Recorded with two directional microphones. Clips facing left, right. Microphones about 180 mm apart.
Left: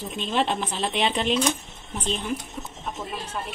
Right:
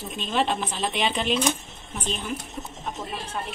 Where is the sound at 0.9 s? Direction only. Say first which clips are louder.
Left 2 dB; 10° right (ahead or behind).